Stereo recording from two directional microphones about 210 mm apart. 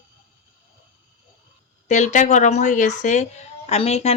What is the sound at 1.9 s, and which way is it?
Speech, 35° left (ahead or behind).